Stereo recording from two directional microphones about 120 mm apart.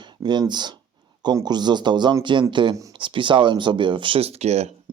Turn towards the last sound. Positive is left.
turn(degrees=-65)  # may be behind; listen again after turning